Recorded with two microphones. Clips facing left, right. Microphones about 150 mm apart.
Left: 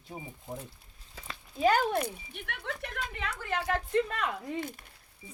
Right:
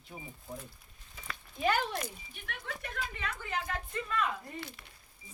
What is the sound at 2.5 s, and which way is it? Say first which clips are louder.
Speech: left 3 dB; 70° left (ahead or behind).